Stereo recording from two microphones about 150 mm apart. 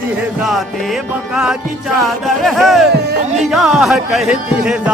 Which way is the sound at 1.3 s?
5° right (ahead or behind).